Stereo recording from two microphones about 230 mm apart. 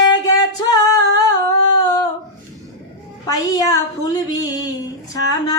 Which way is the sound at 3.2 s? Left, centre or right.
Centre.